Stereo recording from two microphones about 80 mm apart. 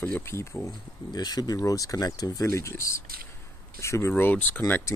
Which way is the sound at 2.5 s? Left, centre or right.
Left.